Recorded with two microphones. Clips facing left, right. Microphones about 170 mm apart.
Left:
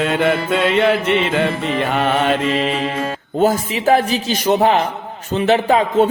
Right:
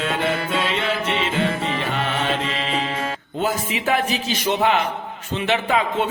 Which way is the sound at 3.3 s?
40° left (ahead or behind).